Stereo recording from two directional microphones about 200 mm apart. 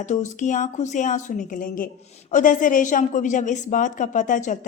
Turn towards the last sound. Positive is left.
turn(degrees=40)  # may be behind; listen again after turning